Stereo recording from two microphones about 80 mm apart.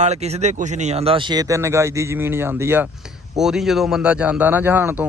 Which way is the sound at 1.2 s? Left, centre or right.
Right.